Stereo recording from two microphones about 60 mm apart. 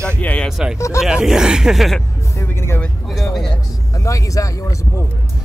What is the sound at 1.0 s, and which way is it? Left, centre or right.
Speech, centre.